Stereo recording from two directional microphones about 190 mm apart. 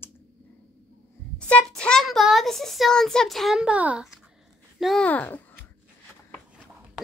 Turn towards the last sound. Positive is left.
turn(degrees=10)  # may be behind; listen again after turning